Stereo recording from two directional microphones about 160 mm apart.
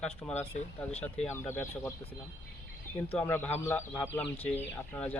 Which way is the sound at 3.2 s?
15° left (ahead or behind).